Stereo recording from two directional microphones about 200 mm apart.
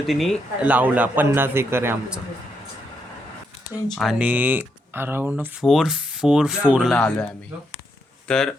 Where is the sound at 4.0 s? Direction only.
5° right (ahead or behind).